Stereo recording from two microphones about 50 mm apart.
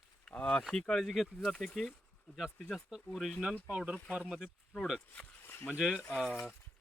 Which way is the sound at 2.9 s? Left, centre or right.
Centre.